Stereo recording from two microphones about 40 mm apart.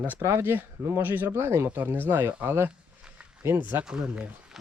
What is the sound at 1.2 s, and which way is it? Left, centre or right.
Speech, right.